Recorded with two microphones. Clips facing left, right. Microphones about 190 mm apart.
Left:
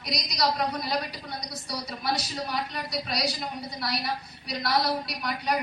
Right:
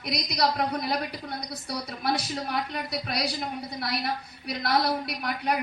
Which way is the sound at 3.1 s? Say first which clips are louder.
Right 1 dB; 55° right (ahead or behind).